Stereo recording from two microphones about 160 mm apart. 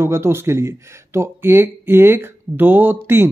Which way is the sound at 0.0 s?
15° right (ahead or behind).